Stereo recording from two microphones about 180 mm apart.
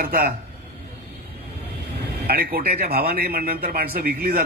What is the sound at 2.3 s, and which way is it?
A man's voice, 60° right (ahead or behind).